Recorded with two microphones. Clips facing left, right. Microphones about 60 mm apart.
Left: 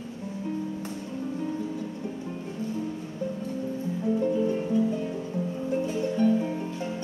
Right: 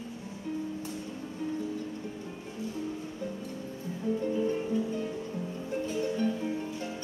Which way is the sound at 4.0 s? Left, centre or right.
Centre.